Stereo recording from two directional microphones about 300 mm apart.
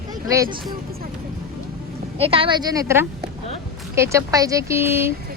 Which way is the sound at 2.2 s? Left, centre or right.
Centre.